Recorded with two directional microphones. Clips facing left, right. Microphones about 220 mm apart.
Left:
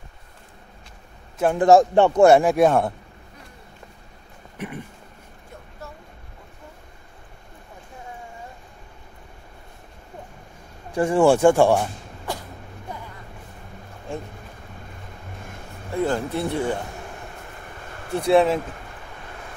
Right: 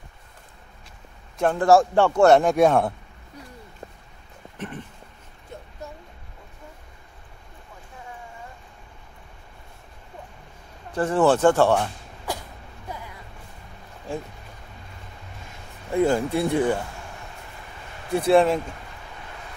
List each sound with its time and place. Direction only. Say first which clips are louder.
1.4 s a man's voice: left 2 dB; 15° left (ahead or behind)
4.6 s a sound: left 2 dB; 10° left (ahead or behind)
10.9 s speech: left 2 dB; 15° left (ahead or behind)
16.0 s speech: right 3 dB; 15° right (ahead or behind)
18.2 s speech: even; centre (ahead or behind)